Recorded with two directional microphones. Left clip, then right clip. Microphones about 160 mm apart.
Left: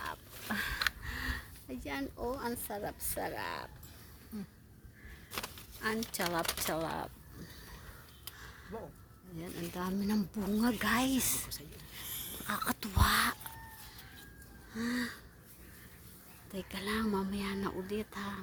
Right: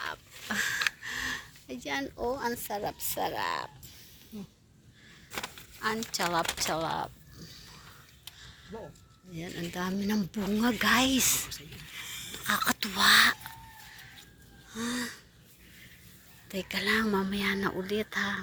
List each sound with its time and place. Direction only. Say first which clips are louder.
0.0 s a sound: right 4 dB; 5° left (ahead or behind)
1.0 s speech: right 6 dB; 10° left (ahead or behind)
5.8 s speech: right 5 dB; 20° left (ahead or behind)
6.7 s a sound: right 5 dB; 25° left (ahead or behind)
8.7 s a woman's voice: right 2 dB; 10° left (ahead or behind)
9.9 s a woman's voice: right 4 dB; 10° left (ahead or behind)
11.5 s a sound: right 5 dB; 25° left (ahead or behind)
12.3 s speech: right 8 dB; centre (ahead or behind)
14.7 s gasp: right 2 dB; 25° left (ahead or behind)
16.5 s a woman's voice: right 9 dB; 5° left (ahead or behind)